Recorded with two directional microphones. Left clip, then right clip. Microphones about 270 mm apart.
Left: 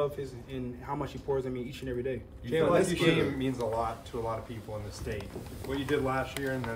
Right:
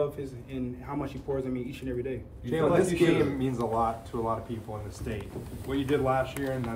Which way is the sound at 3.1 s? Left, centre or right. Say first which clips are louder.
Right 2 dB; centre.